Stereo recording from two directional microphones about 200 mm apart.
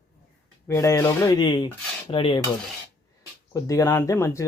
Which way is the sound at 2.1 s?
25° left (ahead or behind).